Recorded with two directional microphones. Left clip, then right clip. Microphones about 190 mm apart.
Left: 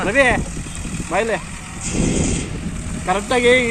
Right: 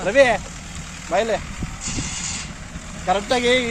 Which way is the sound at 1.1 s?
75° right (ahead or behind).